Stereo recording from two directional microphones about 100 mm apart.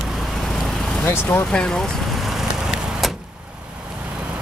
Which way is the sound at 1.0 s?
20° left (ahead or behind).